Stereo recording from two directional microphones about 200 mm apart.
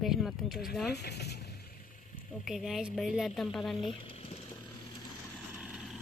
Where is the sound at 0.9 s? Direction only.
55° left (ahead or behind).